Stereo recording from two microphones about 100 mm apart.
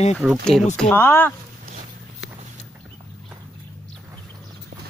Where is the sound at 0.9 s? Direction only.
20° left (ahead or behind).